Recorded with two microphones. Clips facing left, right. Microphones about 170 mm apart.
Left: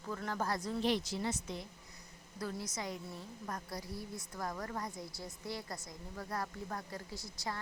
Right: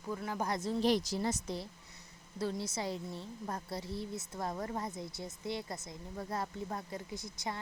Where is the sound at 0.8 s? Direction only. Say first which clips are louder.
Right 4 dB; 40° right (ahead or behind).